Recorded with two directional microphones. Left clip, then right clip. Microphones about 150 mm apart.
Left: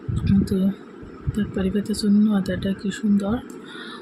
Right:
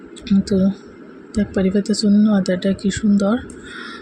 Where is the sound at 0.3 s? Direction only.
25° right (ahead or behind).